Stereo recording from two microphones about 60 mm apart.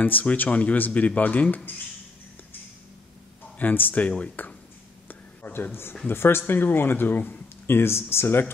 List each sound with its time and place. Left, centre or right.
0.0 s speech: left
3.5 s speech: left
5.0 s a sound: left
6.0 s speech: left